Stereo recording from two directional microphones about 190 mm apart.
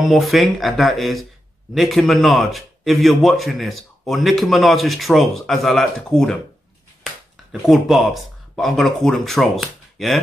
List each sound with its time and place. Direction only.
0.0 s a man's voice: centre (ahead or behind)
7.6 s a man's voice: centre (ahead or behind)